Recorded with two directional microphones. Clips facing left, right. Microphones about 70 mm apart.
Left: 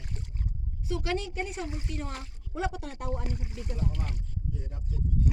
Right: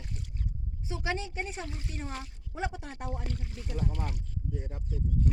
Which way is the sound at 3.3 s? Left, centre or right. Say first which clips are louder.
Left 2 dB; centre.